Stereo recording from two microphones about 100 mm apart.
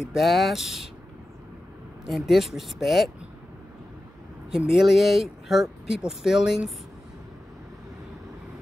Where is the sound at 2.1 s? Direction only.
Centre (ahead or behind).